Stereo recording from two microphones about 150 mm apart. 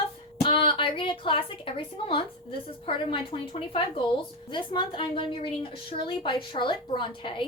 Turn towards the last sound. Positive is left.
turn(degrees=30)  # may be behind; listen again after turning